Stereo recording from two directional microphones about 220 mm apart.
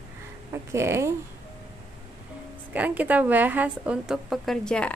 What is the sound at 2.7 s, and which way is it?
A woman's voice, 5° right (ahead or behind).